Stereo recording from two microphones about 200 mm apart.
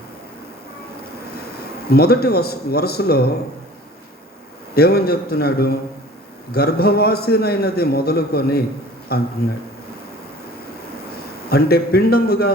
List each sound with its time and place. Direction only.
1.9 s a man's voice: 50° left (ahead or behind)
4.7 s a man's voice: 50° left (ahead or behind)
11.4 s a man's voice: 50° left (ahead or behind)